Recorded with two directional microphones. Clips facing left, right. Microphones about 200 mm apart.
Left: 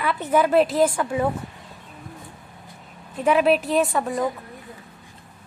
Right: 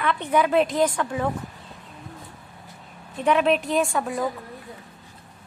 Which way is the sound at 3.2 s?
5° left (ahead or behind).